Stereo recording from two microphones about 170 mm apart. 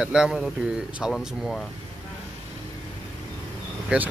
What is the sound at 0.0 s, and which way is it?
Speech, 5° right (ahead or behind).